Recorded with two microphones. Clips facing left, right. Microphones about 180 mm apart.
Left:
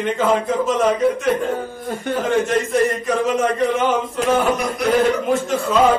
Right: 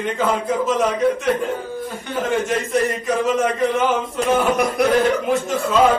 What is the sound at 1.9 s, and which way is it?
Speech, 55° left (ahead or behind).